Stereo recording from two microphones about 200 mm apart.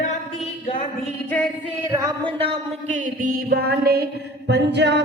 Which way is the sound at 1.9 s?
20° right (ahead or behind).